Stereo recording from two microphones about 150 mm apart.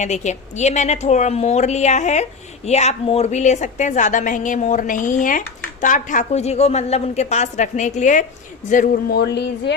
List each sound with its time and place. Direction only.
0.0 s a woman's voice: 50° left (ahead or behind)
8.7 s speech: 75° left (ahead or behind)